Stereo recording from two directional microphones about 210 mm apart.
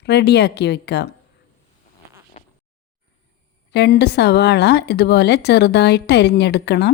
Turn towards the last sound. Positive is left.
turn(degrees=55)  # may be behind; listen again after turning